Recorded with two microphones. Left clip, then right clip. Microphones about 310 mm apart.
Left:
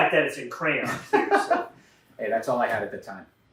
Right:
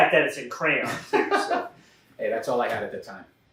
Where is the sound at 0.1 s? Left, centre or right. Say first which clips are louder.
Right 2 dB; centre.